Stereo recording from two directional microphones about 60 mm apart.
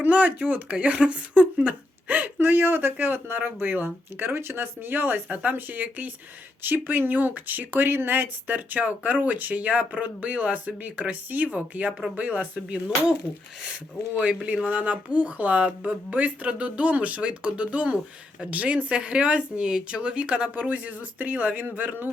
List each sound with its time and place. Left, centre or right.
0.0 s speech: right
4.4 s speech: right
14.2 s speech: right